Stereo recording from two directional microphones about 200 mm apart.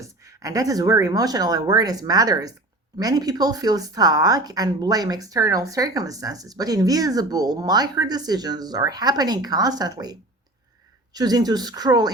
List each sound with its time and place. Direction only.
0.0 s a woman's voice: 15° right (ahead or behind)